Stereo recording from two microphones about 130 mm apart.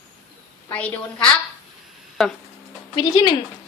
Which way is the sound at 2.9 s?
30° left (ahead or behind).